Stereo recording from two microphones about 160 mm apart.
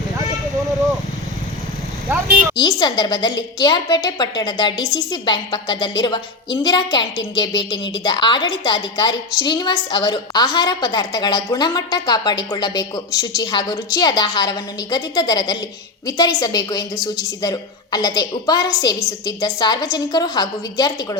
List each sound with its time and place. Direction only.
2.6 s a woman's voice: 25° left (ahead or behind)